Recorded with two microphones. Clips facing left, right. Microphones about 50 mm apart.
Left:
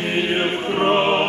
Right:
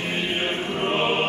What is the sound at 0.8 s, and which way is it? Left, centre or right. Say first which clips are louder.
Music: left 8 dB; left.